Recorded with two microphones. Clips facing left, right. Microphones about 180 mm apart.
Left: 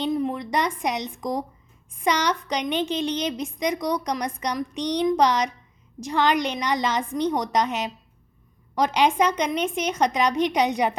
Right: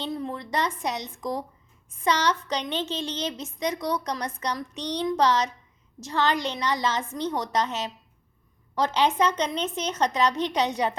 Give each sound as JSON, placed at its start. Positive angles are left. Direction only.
{"t": 0.0, "sound": "a woman's voice", "side_deg": 15}